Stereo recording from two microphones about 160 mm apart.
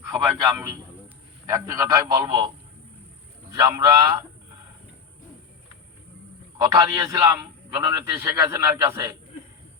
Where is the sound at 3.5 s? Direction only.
25° right (ahead or behind).